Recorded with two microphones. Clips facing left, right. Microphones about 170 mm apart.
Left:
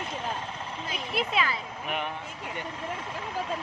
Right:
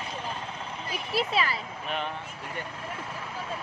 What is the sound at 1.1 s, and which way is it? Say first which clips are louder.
Speech: right 1 dB; 35° right (ahead or behind).